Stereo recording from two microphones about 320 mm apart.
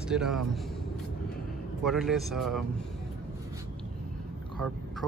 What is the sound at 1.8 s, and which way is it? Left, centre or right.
Speech, centre.